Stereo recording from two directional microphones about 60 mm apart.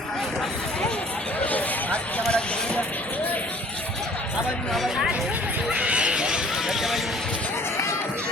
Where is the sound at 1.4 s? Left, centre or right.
Left.